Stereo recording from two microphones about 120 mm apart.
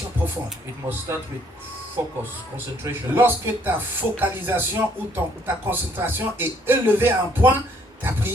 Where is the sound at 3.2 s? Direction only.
15° right (ahead or behind).